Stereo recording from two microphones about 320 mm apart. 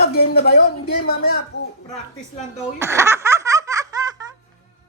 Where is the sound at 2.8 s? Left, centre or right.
Centre.